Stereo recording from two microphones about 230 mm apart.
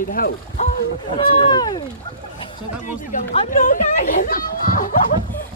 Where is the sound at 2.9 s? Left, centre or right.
Left.